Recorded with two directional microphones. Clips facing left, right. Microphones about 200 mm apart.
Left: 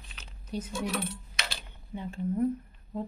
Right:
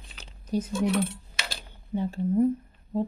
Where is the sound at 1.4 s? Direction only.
35° right (ahead or behind).